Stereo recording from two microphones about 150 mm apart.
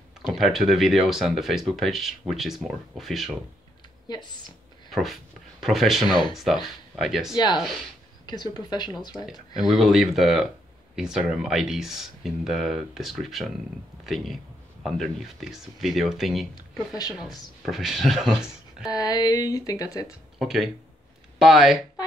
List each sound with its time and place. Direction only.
0.3 s speech: centre (ahead or behind)
4.1 s a woman's voice: 30° left (ahead or behind)
4.9 s speech: centre (ahead or behind)
8.3 s a woman's voice: 30° left (ahead or behind)
9.6 s speech: centre (ahead or behind)
17.6 s speech: centre (ahead or behind)
18.9 s a woman's voice: 25° left (ahead or behind)
20.3 s speech: centre (ahead or behind)